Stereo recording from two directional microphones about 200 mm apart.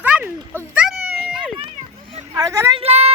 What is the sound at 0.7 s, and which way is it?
Cat, 5° right (ahead or behind).